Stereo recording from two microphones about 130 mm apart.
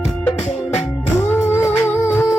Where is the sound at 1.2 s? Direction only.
15° left (ahead or behind).